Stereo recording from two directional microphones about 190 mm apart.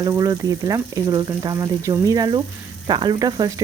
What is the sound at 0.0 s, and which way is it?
Speech, 20° right (ahead or behind).